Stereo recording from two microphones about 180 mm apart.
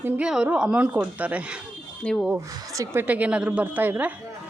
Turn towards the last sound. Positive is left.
turn(degrees=-10)  # may be behind; listen again after turning